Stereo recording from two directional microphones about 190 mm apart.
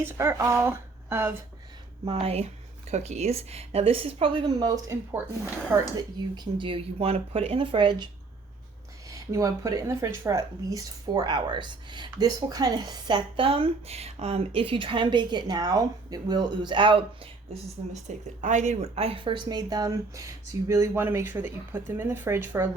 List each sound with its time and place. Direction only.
0.0 s speech: 10° right (ahead or behind)
2.0 s a woman's voice: 30° right (ahead or behind); by 5.9 s 15° right (ahead or behind)
6.3 s speech: 25° right (ahead or behind)
9.0 s a woman's voice: 15° right (ahead or behind)